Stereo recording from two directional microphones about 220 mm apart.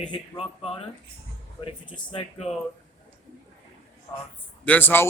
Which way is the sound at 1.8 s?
20° left (ahead or behind).